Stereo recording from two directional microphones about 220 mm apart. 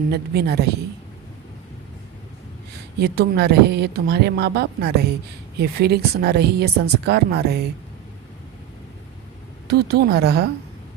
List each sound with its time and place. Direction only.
0.1 s speech: 45° right (ahead or behind)
3.0 s speech: 45° right (ahead or behind)
9.6 s speech: 45° right (ahead or behind)